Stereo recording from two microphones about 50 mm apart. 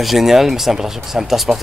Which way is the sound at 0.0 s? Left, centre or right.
Centre.